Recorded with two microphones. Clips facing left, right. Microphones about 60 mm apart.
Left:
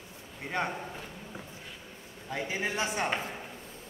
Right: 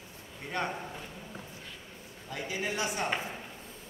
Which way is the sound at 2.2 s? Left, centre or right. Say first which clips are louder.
Left 2 dB; left.